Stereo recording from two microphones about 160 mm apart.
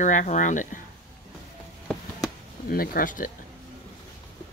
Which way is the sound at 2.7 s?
65° left (ahead or behind).